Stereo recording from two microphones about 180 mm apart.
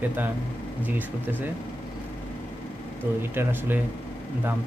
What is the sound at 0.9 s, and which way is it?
Speech, 10° right (ahead or behind).